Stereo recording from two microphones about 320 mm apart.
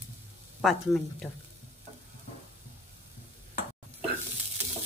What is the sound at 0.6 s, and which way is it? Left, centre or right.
Speech, centre.